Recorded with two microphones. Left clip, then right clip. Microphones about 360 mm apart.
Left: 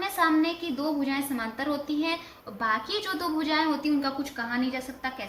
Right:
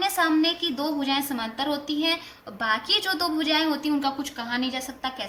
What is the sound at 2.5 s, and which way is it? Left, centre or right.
Speech, centre.